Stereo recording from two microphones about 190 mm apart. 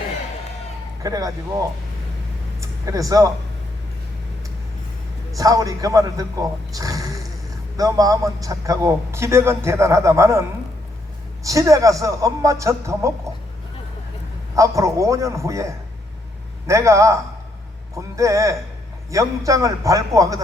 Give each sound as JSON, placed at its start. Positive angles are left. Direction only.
{"t": 1.0, "sound": "speech", "side_deg": -20}
{"t": 2.6, "sound": "speech", "side_deg": -15}
{"t": 5.4, "sound": "a man's voice", "side_deg": -20}
{"t": 6.7, "sound": "a sound", "side_deg": -20}
{"t": 7.8, "sound": "a man's voice", "side_deg": -20}
{"t": 11.4, "sound": "a man's voice", "side_deg": -15}
{"t": 14.5, "sound": "a man's voice", "side_deg": -15}
{"t": 18.2, "sound": "a man's voice", "side_deg": -15}